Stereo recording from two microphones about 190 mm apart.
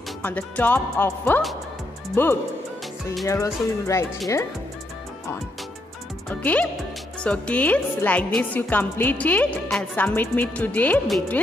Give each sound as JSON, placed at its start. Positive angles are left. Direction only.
{"t": 0.2, "sound": "a woman's voice", "side_deg": 10}
{"t": 6.2, "sound": "a woman's voice", "side_deg": 10}